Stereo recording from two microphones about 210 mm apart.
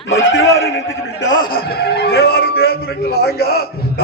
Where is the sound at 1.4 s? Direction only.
45° left (ahead or behind).